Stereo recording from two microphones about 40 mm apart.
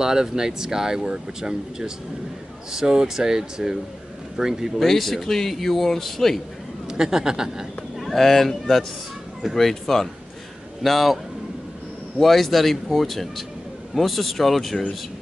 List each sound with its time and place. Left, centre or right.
0.0 s speech: centre
4.8 s a man's voice: centre
6.9 s speech: centre
8.0 s a man's voice: centre
12.2 s a man's voice: centre